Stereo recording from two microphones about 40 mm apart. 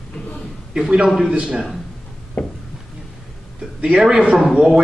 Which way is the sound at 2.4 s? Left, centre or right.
Left.